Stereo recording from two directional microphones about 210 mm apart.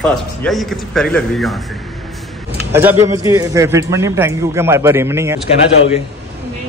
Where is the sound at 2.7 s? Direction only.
10° right (ahead or behind).